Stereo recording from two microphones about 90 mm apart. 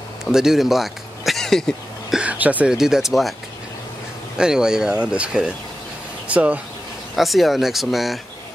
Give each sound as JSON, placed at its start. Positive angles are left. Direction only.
{"t": 0.2, "sound": "speech", "side_deg": -5}
{"t": 2.1, "sound": "speech", "side_deg": -15}
{"t": 4.4, "sound": "speech", "side_deg": -10}
{"t": 7.2, "sound": "speech", "side_deg": 0}